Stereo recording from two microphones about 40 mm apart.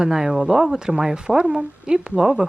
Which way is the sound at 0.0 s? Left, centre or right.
Centre.